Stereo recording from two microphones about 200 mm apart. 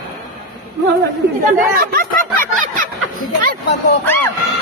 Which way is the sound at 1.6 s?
45° right (ahead or behind).